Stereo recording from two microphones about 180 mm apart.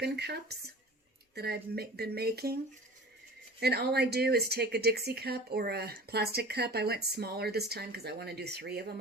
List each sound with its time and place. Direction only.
0.0 s a woman's voice: 65° right (ahead or behind)
3.6 s a woman's voice: 65° right (ahead or behind)